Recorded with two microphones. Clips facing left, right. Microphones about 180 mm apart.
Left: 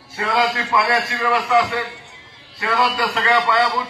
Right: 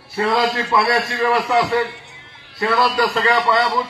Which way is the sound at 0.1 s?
35° right (ahead or behind).